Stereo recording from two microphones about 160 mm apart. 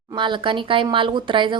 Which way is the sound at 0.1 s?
30° right (ahead or behind).